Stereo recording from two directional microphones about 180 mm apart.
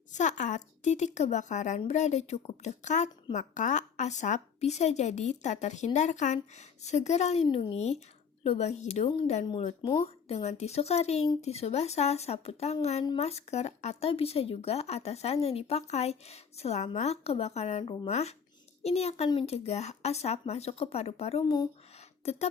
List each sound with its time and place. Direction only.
0.1 s speech: 40° left (ahead or behind); by 21.7 s 25° left (ahead or behind)
22.2 s speech: 35° left (ahead or behind)